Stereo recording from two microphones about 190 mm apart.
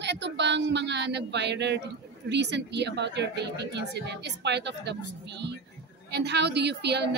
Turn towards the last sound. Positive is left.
turn(degrees=-60)  # may be behind; listen again after turning